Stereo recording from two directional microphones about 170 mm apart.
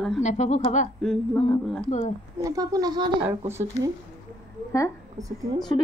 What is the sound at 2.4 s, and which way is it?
Speech, 20° right (ahead or behind).